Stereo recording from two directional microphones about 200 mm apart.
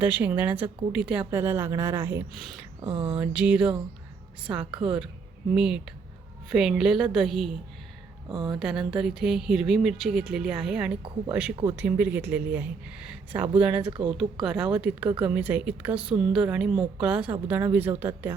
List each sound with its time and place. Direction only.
0.0 s speech: 10° right (ahead or behind)
2.8 s speech: 25° right (ahead or behind)
3.2 s speech: 5° right (ahead or behind)
4.7 s speech: 25° right (ahead or behind)
5.5 s speech: 5° right (ahead or behind)
8.3 s speech: 20° right (ahead or behind)
8.5 s speech: centre (ahead or behind)
13.8 s speech: 25° right (ahead or behind)
14.4 s speech: 5° right (ahead or behind)